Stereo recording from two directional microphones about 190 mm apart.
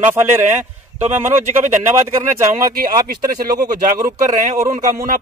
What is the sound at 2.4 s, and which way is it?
Speech, 45° right (ahead or behind).